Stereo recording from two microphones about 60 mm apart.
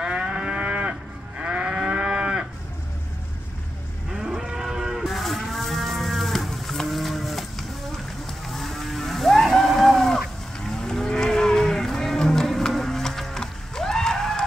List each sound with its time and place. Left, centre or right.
0.0 s moo: centre
4.1 s moo: centre
8.5 s cattle: centre